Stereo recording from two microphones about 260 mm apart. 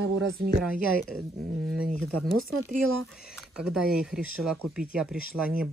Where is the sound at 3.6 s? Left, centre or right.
Centre.